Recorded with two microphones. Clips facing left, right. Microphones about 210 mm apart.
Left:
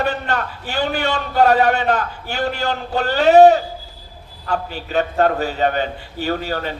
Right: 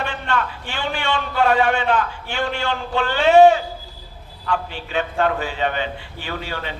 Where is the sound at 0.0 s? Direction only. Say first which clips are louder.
Left 3 dB; 40° left (ahead or behind).